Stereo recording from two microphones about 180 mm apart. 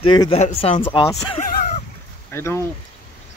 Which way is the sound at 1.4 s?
55° left (ahead or behind).